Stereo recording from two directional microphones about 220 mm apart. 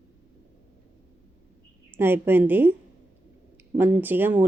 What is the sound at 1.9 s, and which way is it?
Speech, 10° right (ahead or behind).